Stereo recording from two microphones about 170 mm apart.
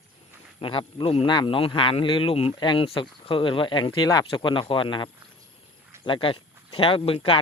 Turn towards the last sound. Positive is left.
turn(degrees=35)  # may be behind; listen again after turning